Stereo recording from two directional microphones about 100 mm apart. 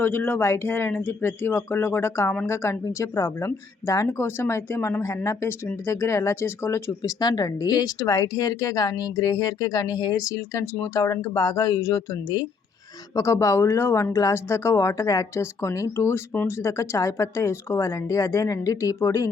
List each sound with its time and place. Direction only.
0.0 s speech: 20° left (ahead or behind)
7.2 s speech: 40° left (ahead or behind)
13.1 s speech: 30° left (ahead or behind)